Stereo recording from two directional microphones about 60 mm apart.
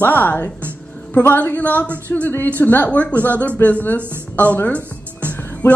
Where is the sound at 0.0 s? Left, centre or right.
Left.